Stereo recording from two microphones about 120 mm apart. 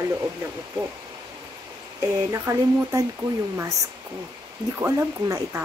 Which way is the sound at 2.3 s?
25° right (ahead or behind).